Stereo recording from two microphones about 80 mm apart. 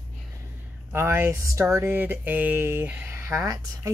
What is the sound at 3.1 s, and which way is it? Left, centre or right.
Speech, right.